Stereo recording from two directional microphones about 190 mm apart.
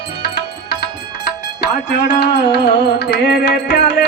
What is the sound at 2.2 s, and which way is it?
Music, 60° left (ahead or behind).